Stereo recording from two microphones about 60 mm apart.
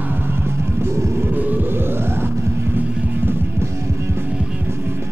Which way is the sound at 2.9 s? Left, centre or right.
Right.